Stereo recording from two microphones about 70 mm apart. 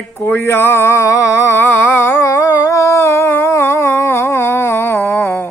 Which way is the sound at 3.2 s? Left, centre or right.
Left.